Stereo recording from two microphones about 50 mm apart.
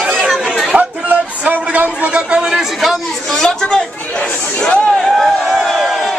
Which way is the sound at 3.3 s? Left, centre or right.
Centre.